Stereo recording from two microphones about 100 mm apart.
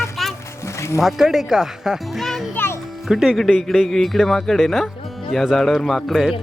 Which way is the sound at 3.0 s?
5° right (ahead or behind).